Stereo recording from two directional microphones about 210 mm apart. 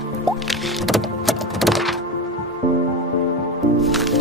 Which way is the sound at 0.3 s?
Centre (ahead or behind).